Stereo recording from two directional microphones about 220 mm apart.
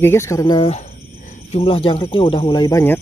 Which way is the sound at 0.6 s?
30° left (ahead or behind).